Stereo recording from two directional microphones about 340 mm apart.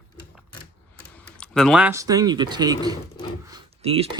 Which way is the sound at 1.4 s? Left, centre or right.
Centre.